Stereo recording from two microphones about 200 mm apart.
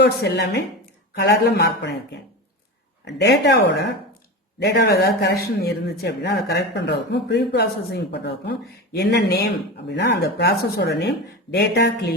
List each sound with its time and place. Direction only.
0.0 s a man's voice: 55° left (ahead or behind)
3.0 s a man's voice: 60° left (ahead or behind)